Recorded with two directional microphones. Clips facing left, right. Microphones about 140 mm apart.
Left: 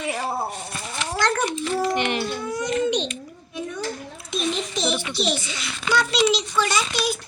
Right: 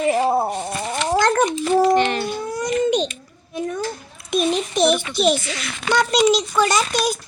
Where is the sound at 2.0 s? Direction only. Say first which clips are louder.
Right 5 dB; 15° left (ahead or behind).